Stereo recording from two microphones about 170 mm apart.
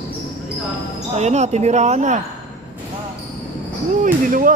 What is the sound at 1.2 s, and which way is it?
Speech, 40° right (ahead or behind).